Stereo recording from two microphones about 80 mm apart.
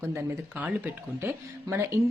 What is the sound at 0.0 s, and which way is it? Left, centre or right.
Speech, right.